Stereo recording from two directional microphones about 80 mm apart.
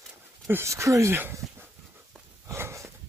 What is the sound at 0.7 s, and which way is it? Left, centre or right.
Speech, right.